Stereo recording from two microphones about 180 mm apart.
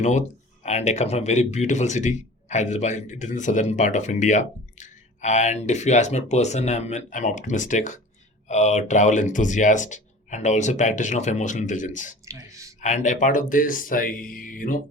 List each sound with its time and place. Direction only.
0.0 s speech: 40° left (ahead or behind)
12.2 s a sound: 15° right (ahead or behind)
12.8 s speech: 40° left (ahead or behind)